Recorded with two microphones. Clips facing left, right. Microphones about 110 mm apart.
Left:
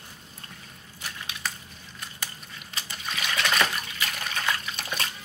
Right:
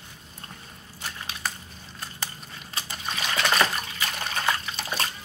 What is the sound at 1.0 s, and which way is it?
Squish, 35° right (ahead or behind).